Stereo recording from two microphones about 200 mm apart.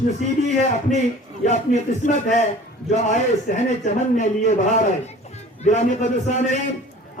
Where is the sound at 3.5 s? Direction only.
45° left (ahead or behind).